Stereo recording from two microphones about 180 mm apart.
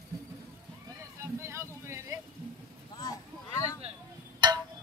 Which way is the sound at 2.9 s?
20° left (ahead or behind).